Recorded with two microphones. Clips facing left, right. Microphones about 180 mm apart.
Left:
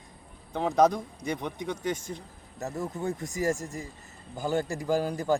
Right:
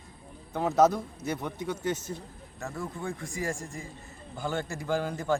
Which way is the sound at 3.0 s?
40° left (ahead or behind).